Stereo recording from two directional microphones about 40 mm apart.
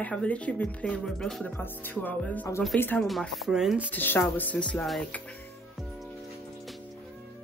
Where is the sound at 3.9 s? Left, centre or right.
Left.